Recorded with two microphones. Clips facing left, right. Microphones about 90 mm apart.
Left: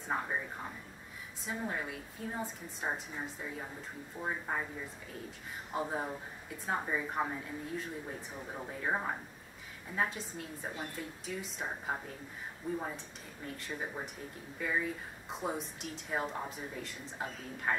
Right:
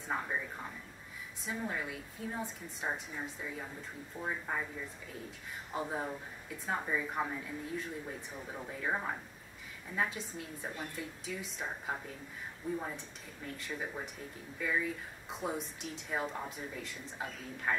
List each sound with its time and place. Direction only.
0.1 s a woman's voice: 10° left (ahead or behind)
1.4 s a woman's voice: 5° left (ahead or behind)
5.7 s a woman's voice: 5° left (ahead or behind)
10.0 s a woman's voice: centre (ahead or behind)